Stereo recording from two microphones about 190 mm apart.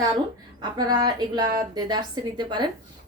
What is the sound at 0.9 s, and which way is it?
A woman's voice, 20° right (ahead or behind).